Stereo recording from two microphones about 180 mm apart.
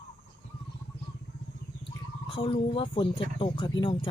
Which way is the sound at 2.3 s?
30° left (ahead or behind).